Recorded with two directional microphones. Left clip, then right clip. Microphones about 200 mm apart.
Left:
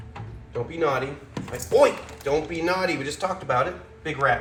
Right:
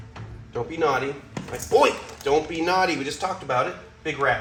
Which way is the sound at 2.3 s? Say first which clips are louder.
Right 2 dB; 25° right (ahead or behind).